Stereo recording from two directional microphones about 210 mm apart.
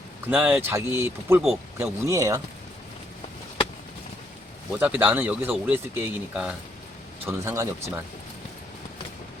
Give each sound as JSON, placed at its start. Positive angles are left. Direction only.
{"t": 0.3, "sound": "speech", "side_deg": -10}
{"t": 4.7, "sound": "speech", "side_deg": -5}